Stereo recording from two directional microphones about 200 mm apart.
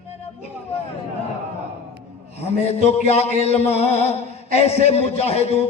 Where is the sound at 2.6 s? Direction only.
30° left (ahead or behind).